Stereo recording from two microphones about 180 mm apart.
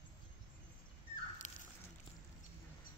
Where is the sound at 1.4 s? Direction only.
45° left (ahead or behind).